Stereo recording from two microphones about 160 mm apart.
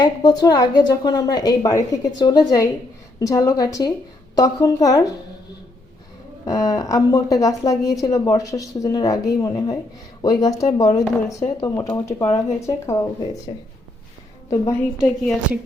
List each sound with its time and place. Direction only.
0.0 s a woman's voice: 25° left (ahead or behind)
6.4 s a woman's voice: 20° left (ahead or behind)
12.5 s a woman's voice: 20° left (ahead or behind)
14.9 s a woman's voice: centre (ahead or behind)